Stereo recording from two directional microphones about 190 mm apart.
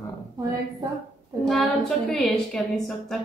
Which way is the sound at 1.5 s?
Centre (ahead or behind).